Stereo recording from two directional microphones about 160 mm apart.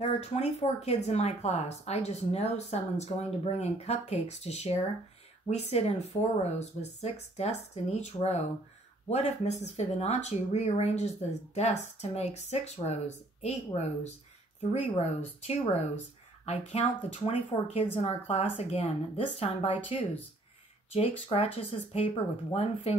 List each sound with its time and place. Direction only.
0.0 s speech: 40° left (ahead or behind)